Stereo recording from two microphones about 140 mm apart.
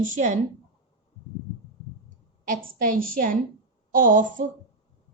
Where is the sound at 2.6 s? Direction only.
90° right.